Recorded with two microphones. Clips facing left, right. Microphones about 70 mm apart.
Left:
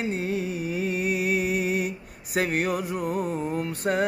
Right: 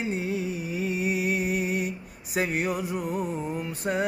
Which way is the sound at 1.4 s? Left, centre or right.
Left.